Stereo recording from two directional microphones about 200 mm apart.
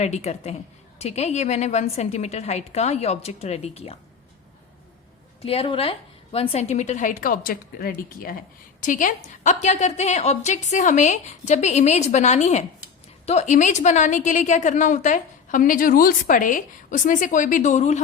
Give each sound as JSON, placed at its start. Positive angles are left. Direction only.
{"t": 0.0, "sound": "a woman's voice", "side_deg": 35}
{"t": 5.4, "sound": "a woman's voice", "side_deg": 30}